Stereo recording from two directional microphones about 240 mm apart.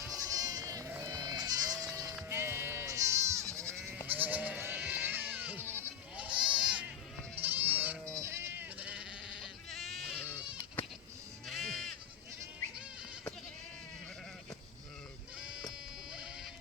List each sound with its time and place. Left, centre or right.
0.0 s sheep: centre
4.0 s goat: centre
8.2 s bleat: centre
11.4 s sheep: centre
15.4 s sheep: centre